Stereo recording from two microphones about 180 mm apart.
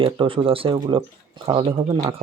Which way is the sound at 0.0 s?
30° right (ahead or behind).